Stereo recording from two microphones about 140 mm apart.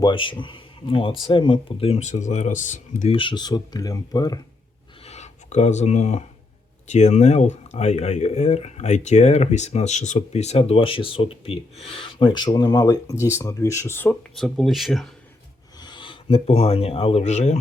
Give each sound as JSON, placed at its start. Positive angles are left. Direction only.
{"t": 0.0, "sound": "speech", "side_deg": 35}
{"t": 3.1, "sound": "speech", "side_deg": 35}
{"t": 5.0, "sound": "speech", "side_deg": 55}
{"t": 14.3, "sound": "speech", "side_deg": 0}
{"t": 15.8, "sound": "speech", "side_deg": 35}